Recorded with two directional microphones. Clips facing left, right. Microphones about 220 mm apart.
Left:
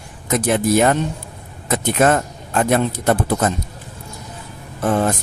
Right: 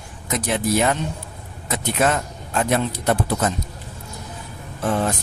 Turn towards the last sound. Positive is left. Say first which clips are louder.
# left 4 dB
turn(degrees=50)  # may be behind; listen again after turning